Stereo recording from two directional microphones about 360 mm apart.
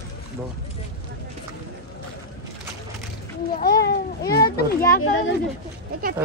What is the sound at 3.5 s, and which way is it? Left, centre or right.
Speech, left.